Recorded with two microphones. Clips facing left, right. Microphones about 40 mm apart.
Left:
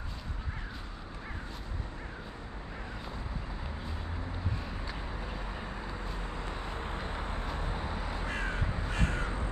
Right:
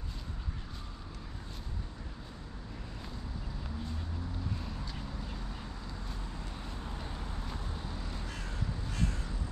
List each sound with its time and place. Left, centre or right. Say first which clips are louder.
5.9 s vehicle: left 5 dB; left